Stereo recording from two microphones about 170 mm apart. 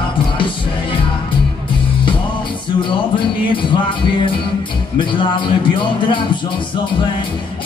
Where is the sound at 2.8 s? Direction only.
30° left (ahead or behind).